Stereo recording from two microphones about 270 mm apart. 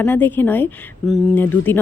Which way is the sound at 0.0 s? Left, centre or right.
Centre.